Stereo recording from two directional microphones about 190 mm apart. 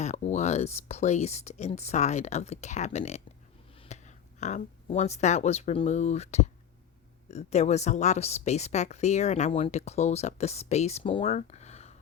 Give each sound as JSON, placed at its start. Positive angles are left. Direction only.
{"t": 0.0, "sound": "a woman's voice", "side_deg": 35}